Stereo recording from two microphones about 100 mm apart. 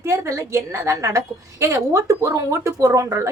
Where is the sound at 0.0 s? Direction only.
30° right (ahead or behind).